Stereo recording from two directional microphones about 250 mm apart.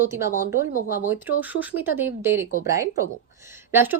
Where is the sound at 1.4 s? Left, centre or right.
Centre.